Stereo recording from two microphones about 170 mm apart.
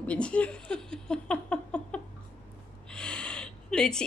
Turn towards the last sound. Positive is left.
turn(degrees=5)  # may be behind; listen again after turning